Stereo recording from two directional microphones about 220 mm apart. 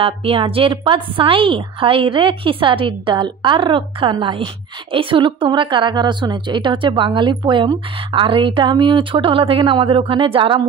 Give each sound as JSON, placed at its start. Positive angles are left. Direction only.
{"t": 0.0, "sound": "a woman's voice", "side_deg": -25}